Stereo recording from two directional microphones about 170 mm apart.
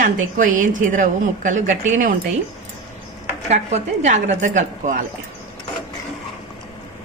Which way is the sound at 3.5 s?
40° right (ahead or behind).